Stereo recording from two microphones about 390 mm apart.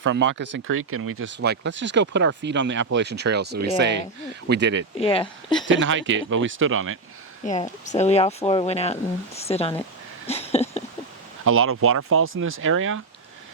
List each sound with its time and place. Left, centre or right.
0.0 s speech: right
4.9 s speech: centre
5.6 s speech: right
7.4 s speech: centre
10.2 s a sound: centre
11.4 s speech: right